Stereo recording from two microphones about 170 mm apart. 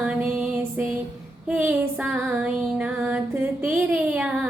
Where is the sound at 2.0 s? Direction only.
10° right (ahead or behind).